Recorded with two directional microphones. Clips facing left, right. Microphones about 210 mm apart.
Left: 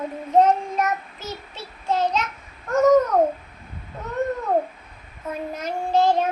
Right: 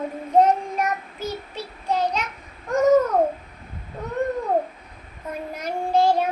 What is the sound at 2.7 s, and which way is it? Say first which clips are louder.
Babbling: left 1 dB; 15° right (ahead or behind).